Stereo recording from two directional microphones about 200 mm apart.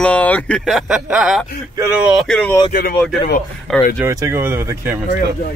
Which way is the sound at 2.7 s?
45° left (ahead or behind).